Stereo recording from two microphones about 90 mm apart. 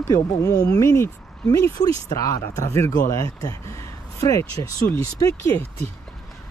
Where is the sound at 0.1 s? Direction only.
40° left (ahead or behind).